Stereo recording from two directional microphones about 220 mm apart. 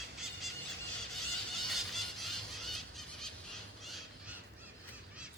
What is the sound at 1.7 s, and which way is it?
Squeal, centre (ahead or behind).